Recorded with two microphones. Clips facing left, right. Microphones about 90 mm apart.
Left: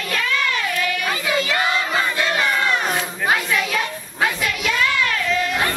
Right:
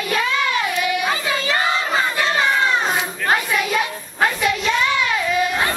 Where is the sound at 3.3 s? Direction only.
10° right (ahead or behind).